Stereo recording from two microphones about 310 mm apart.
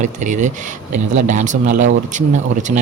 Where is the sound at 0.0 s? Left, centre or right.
Right.